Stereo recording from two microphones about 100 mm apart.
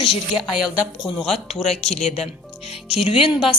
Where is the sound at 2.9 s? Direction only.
75° left (ahead or behind).